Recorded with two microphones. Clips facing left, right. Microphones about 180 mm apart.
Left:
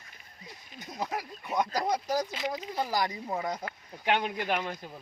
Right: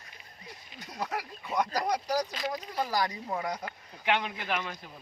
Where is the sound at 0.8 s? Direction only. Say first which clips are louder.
Left 1 dB; 15° left (ahead or behind).